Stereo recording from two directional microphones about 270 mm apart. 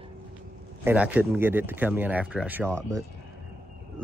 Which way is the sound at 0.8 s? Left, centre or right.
Centre.